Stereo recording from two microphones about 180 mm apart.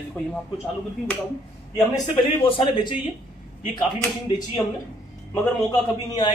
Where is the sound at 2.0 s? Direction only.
30° left (ahead or behind).